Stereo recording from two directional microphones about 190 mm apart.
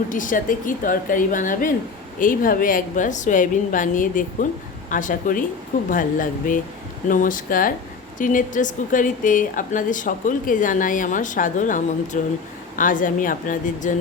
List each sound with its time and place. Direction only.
0.1 s a woman's voice: 45° left (ahead or behind)